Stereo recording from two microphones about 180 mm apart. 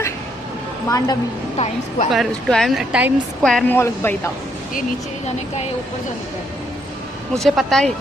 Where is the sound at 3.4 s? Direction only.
5° left (ahead or behind).